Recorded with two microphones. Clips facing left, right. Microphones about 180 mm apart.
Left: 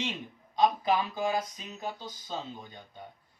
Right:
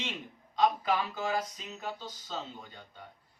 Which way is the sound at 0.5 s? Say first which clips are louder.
Left 2 dB; 15° left (ahead or behind).